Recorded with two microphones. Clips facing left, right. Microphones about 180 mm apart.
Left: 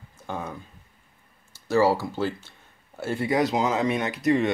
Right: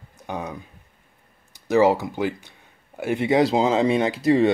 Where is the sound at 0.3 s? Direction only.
15° right (ahead or behind).